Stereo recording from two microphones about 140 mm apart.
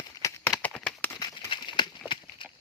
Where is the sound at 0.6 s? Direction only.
10° left (ahead or behind).